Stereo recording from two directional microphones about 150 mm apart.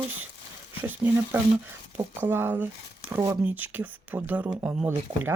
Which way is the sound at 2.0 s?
15° right (ahead or behind).